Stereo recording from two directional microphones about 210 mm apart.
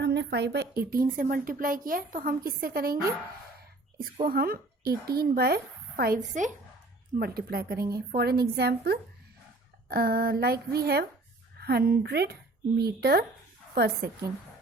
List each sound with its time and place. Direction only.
0.0 s a woman's voice: 55° right (ahead or behind)
4.3 s a woman's voice: 45° right (ahead or behind)